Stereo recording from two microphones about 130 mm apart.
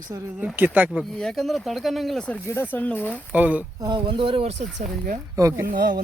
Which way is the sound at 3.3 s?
10° right (ahead or behind).